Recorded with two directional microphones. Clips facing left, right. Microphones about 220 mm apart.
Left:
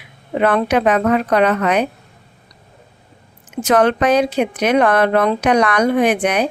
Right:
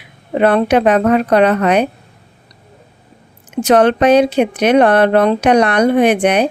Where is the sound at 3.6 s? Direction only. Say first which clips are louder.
Right 4 dB; 30° right (ahead or behind).